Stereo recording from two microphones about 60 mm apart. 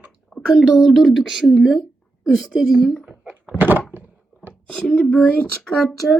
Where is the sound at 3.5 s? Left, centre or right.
Right.